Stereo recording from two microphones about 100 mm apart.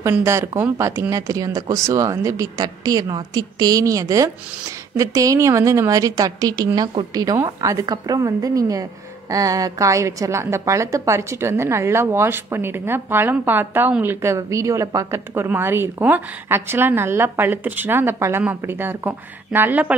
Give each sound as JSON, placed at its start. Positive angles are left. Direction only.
{"t": 0.2, "sound": "a woman's voice", "side_deg": -30}